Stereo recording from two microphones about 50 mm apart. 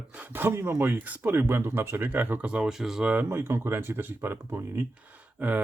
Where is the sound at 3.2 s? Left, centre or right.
Right.